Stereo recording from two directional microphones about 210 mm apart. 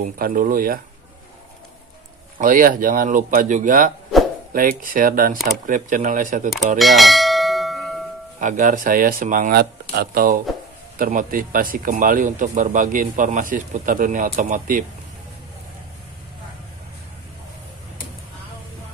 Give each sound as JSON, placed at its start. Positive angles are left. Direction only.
{"t": 0.0, "sound": "speech", "side_deg": -40}
{"t": 2.3, "sound": "speech", "side_deg": -40}
{"t": 6.8, "sound": "bell", "side_deg": 0}
{"t": 8.4, "sound": "speech", "side_deg": -35}